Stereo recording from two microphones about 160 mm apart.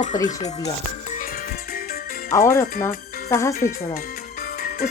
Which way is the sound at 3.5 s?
55° left (ahead or behind).